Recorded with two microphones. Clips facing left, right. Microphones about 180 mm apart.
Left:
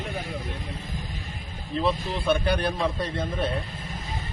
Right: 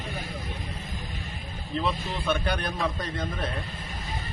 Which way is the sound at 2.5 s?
30° left (ahead or behind).